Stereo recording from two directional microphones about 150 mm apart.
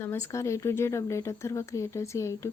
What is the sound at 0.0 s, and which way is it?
Speech, 15° left (ahead or behind).